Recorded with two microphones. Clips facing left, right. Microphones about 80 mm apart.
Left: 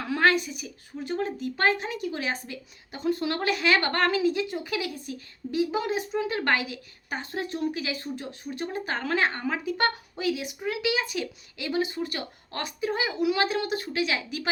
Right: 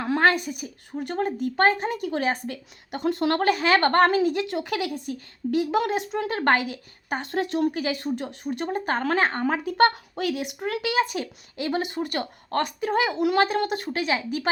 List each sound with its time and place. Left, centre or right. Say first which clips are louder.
0.0 s a woman's voice: right 2 dB; right
4.4 s speech: right 4 dB; right
6.2 s a woman's voice: right 7 dB; right
7.2 s speech: right 6 dB; right
8.0 s a woman's voice: right 6 dB; right
11.8 s a woman's voice: right 1 dB; right